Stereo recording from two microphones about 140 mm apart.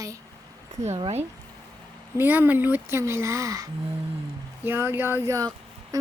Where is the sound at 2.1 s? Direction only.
15° right (ahead or behind).